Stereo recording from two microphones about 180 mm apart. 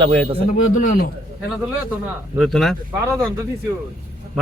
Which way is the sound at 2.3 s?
Centre (ahead or behind).